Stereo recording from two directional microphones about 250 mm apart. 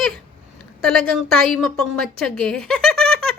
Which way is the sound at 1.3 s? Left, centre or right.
Centre.